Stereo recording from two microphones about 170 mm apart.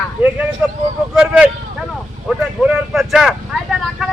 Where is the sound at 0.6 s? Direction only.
10° right (ahead or behind).